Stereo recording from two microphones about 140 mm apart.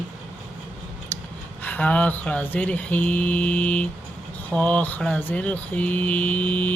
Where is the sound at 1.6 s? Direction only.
10° left (ahead or behind).